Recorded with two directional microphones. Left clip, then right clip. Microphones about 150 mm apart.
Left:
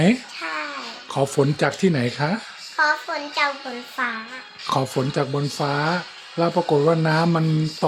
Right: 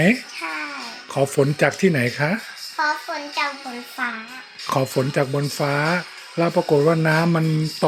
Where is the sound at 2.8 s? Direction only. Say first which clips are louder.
Left 2 dB; 25° left (ahead or behind).